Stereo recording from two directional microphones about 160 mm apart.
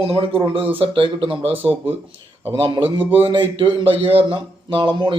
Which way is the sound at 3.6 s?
35° right (ahead or behind).